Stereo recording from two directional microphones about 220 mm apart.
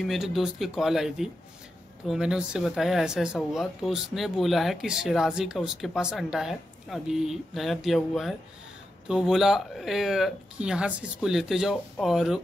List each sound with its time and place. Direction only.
0.0 s speech: centre (ahead or behind)